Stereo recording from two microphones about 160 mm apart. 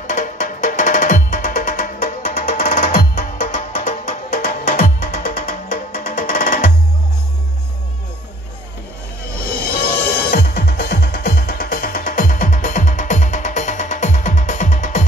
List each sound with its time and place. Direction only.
0.0 s music: 50° left (ahead or behind)
9.4 s music: 70° left (ahead or behind); by 15.0 s 55° left (ahead or behind)